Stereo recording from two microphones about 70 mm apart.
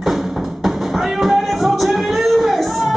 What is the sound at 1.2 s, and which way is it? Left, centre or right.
Music, centre.